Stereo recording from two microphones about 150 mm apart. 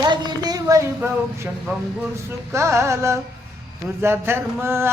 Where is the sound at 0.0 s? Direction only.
30° right (ahead or behind).